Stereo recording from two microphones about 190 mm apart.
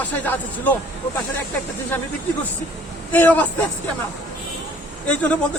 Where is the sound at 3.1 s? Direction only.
10° left (ahead or behind).